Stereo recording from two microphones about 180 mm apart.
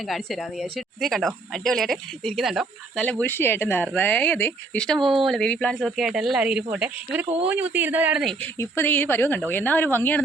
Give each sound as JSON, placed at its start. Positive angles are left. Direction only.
{"t": 0.1, "sound": "speech", "side_deg": 0}
{"t": 8.5, "sound": "speech", "side_deg": 10}